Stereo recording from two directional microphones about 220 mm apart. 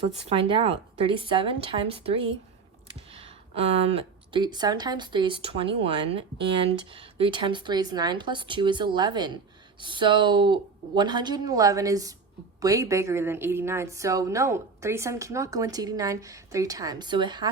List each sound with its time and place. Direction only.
0.0 s a woman's voice: 25° right (ahead or behind)